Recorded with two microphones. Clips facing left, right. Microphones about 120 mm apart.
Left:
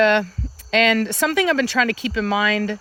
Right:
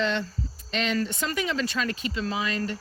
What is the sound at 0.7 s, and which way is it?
Speech, 90° left.